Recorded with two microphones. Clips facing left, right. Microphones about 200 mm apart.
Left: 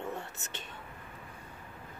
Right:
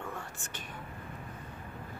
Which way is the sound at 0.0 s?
25° left (ahead or behind).